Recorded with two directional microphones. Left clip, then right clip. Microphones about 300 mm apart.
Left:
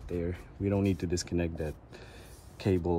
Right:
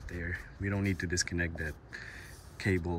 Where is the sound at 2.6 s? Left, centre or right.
Centre.